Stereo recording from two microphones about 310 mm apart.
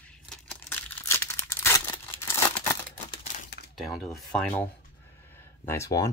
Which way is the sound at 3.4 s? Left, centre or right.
Left.